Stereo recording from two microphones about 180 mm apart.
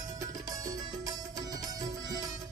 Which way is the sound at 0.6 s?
20° right (ahead or behind).